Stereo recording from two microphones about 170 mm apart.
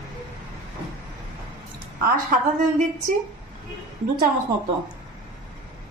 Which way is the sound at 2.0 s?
55° right (ahead or behind).